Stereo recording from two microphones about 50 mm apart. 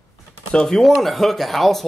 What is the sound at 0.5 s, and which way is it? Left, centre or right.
Speech, centre.